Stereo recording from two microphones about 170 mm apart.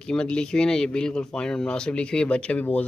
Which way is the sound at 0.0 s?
5° left (ahead or behind).